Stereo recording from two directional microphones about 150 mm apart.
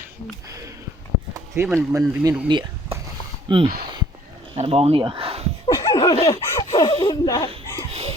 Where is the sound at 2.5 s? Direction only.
30° right (ahead or behind).